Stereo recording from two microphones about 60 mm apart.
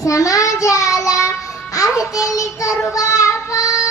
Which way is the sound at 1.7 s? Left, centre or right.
Left.